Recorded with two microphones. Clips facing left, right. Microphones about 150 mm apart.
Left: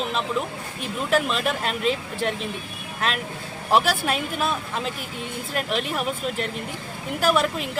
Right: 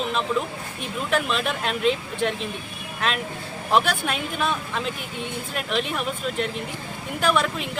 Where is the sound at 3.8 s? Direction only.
40° left (ahead or behind).